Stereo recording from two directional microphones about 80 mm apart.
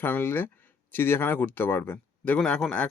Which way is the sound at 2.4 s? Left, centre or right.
Centre.